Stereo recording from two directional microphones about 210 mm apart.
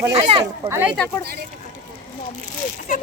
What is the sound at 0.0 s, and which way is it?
Speech, 25° right (ahead or behind).